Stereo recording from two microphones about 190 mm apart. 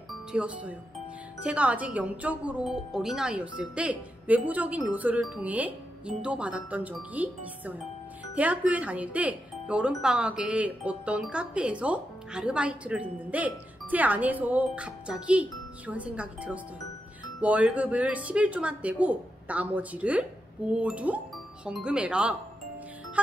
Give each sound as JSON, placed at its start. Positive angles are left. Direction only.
{"t": 0.3, "sound": "speech", "side_deg": -5}